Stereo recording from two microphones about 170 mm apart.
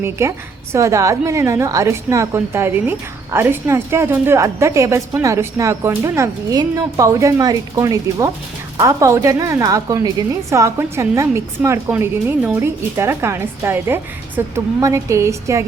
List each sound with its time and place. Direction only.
0.0 s a woman's voice: 15° right (ahead or behind)